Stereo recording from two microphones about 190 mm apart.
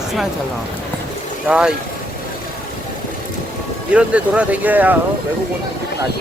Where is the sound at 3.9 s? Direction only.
5° right (ahead or behind).